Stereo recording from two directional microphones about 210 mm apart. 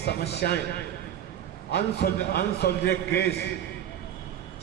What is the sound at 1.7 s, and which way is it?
A man's voice, 50° left (ahead or behind).